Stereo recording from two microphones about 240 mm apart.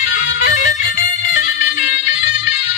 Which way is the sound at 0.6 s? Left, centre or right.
Left.